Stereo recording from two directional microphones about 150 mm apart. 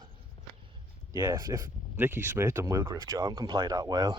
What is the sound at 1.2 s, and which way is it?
Speech, 20° right (ahead or behind).